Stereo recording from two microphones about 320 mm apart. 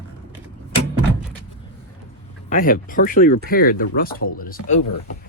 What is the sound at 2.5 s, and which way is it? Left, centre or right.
Speech, left.